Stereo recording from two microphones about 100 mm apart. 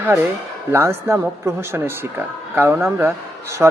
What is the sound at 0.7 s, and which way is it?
Speech, 25° right (ahead or behind).